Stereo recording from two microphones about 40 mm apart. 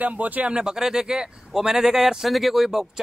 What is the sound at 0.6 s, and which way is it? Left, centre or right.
Speech, centre.